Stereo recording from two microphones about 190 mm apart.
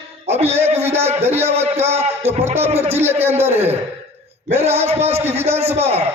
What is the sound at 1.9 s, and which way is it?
Music, 35° right (ahead or behind).